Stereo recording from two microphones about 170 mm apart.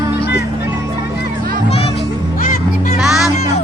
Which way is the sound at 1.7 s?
35° left (ahead or behind).